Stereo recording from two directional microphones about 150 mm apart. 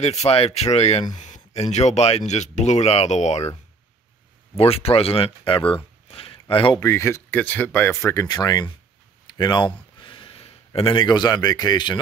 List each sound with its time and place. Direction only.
0.0 s speech: 45° left (ahead or behind)
4.6 s speech: 40° left (ahead or behind)
6.0 s a sound: 40° left (ahead or behind)
6.5 s speech: 35° left (ahead or behind)
6.8 s speech: 20° left (ahead or behind)